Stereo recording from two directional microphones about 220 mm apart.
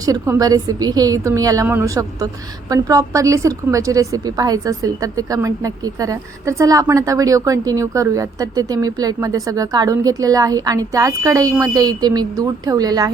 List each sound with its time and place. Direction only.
0.0 s a woman's voice: 15° right (ahead or behind)